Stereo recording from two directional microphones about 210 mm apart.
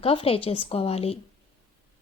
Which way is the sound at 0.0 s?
25° left (ahead or behind).